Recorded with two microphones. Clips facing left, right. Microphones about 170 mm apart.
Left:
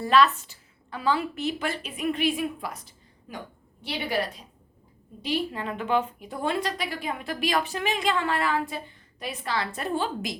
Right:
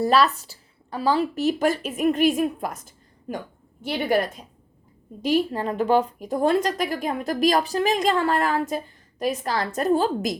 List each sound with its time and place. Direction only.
0.0 s a woman's voice: 40° right (ahead or behind)